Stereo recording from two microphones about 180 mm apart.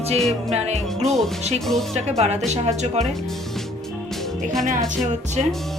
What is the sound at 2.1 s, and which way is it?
Music, 35° right (ahead or behind).